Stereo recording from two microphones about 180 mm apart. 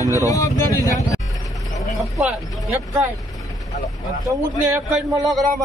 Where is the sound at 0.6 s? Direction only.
20° left (ahead or behind).